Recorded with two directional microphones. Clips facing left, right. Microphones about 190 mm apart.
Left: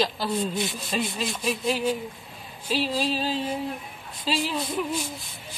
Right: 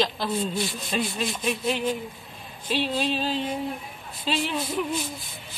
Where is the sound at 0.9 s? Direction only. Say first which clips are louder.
Right 1 dB; centre (ahead or behind).